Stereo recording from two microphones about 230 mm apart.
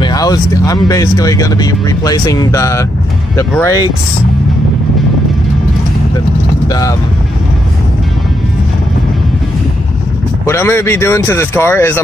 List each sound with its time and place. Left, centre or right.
0.0 s speech: centre
6.7 s speech: centre
10.4 s speech: centre